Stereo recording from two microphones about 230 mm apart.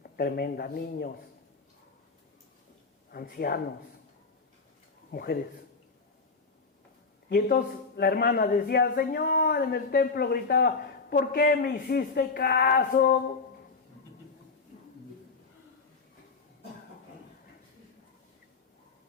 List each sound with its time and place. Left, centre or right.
0.0 s a man's voice: left
3.1 s a man's voice: left
5.1 s a man's voice: left
7.3 s a man's voice: left